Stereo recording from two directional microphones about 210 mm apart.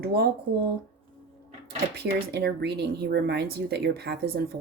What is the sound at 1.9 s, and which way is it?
Speech, 50° right (ahead or behind).